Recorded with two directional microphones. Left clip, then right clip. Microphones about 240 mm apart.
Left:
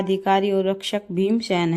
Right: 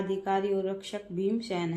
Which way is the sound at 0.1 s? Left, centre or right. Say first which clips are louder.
Left 9 dB; left.